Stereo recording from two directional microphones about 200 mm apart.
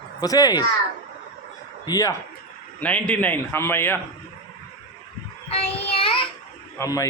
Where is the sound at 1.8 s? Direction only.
20° left (ahead or behind).